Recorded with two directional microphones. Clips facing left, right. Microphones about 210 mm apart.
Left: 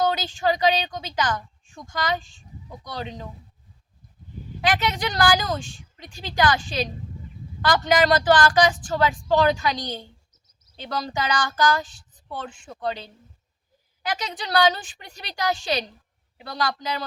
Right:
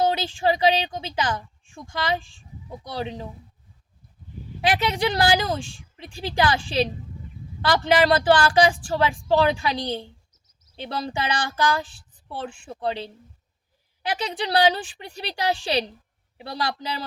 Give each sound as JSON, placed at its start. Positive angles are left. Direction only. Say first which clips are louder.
{"t": 0.0, "sound": "a woman's voice", "louder": "right 1 dB", "side_deg": -30}
{"t": 4.6, "sound": "speech", "louder": "right 2 dB", "side_deg": -30}